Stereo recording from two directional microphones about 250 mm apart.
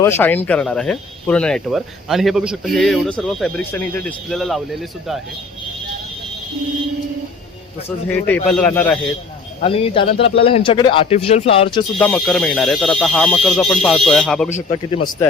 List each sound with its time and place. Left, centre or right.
0.0 s speech: centre
7.9 s speech: centre
9.6 s speech: left
11.9 s speech: centre
14.5 s speech: left